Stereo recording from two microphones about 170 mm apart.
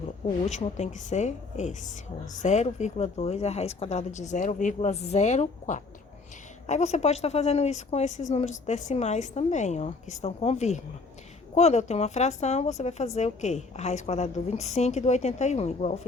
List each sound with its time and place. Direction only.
0.4 s a woman's voice: 40° left (ahead or behind)